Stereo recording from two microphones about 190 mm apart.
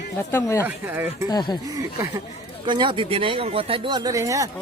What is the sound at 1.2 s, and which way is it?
Speech, 20° left (ahead or behind).